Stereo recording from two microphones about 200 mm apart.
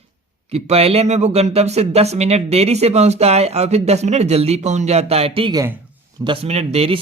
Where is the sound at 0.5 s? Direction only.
30° right (ahead or behind).